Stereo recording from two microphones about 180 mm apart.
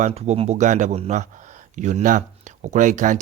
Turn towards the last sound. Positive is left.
turn(degrees=-45)  # may be behind; listen again after turning